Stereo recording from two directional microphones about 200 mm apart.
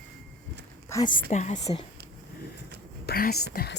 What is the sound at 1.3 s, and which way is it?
Speech, 35° left (ahead or behind).